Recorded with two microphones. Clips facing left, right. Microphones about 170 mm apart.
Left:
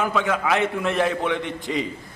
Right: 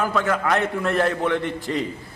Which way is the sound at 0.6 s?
20° left (ahead or behind).